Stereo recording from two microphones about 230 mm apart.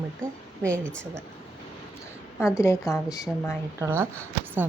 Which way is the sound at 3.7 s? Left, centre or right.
Centre.